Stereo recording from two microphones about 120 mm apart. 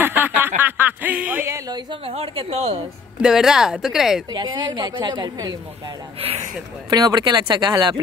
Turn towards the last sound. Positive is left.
turn(degrees=-35)  # may be behind; listen again after turning